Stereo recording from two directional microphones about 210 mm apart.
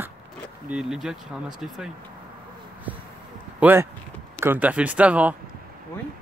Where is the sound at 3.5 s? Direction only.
10° right (ahead or behind).